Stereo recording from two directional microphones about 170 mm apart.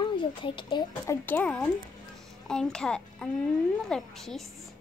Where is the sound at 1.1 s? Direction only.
10° left (ahead or behind).